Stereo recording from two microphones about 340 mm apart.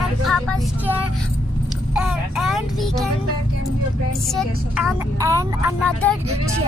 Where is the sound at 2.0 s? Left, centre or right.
Centre.